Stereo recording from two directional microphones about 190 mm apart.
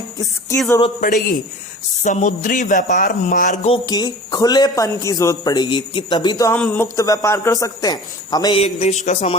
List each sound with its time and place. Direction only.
1.0 s a man's voice: 45° left (ahead or behind)
3.8 s speech: 20° left (ahead or behind)
8.6 s speech: 35° left (ahead or behind)